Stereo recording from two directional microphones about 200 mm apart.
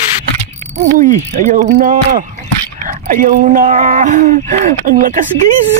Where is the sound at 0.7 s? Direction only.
40° right (ahead or behind).